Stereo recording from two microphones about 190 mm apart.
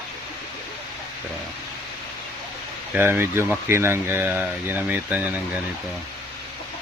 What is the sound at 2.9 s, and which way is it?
Speech, 10° right (ahead or behind).